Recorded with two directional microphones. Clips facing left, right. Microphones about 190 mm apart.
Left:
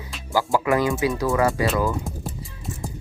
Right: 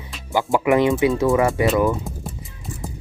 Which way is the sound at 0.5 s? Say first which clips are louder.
Right 5 dB; 20° right (ahead or behind).